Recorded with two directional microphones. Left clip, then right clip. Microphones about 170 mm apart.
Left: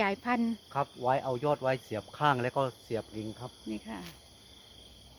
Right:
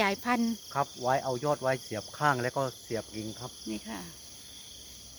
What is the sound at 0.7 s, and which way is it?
Speech, 35° left (ahead or behind).